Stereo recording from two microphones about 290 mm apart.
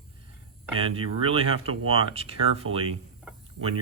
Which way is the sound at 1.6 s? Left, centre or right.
Right.